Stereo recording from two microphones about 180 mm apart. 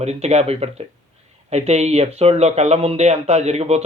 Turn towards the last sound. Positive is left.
turn(degrees=-35)  # may be behind; listen again after turning